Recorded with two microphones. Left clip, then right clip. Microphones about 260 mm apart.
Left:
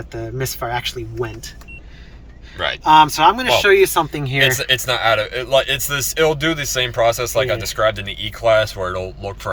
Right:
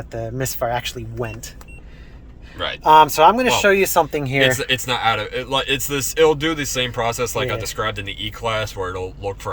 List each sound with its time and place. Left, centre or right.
0.1 s speech: right
2.6 s speech: centre
2.8 s speech: right
4.4 s speech: centre